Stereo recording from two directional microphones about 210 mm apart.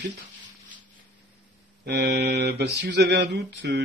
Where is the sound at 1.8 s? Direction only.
55° right (ahead or behind).